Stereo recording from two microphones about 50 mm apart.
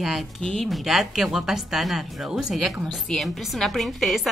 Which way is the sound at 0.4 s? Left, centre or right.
Centre.